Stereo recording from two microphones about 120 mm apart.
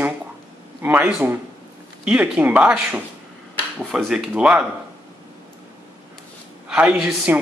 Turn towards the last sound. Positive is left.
turn(degrees=-10)  # may be behind; listen again after turning